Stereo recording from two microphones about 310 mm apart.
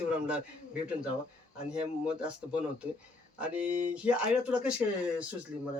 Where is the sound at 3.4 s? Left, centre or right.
Centre.